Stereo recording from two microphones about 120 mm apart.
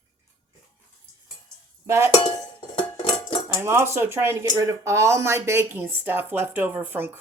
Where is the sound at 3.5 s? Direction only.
20° right (ahead or behind).